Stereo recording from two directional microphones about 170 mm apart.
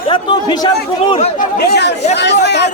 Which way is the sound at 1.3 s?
75° left (ahead or behind).